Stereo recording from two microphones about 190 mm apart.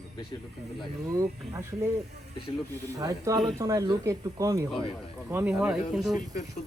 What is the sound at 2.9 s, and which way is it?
Speech, 15° right (ahead or behind).